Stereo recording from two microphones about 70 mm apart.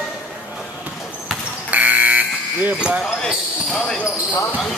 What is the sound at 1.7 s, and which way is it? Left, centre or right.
Fire alarm, right.